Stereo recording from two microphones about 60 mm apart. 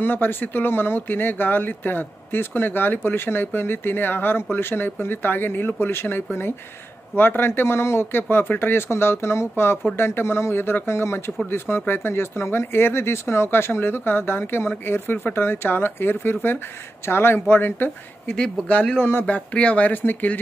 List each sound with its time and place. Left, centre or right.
0.0 s speech: left
18.3 s speech: centre